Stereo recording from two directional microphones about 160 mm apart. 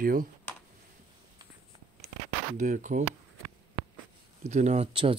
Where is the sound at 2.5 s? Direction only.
55° right (ahead or behind).